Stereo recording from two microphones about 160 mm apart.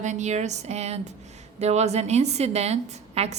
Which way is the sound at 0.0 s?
45° right (ahead or behind).